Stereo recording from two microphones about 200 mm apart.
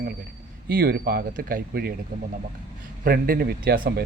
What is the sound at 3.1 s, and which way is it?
Speech, 45° right (ahead or behind).